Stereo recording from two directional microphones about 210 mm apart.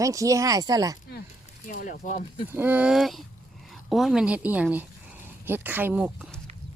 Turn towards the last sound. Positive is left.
turn(degrees=-5)  # may be behind; listen again after turning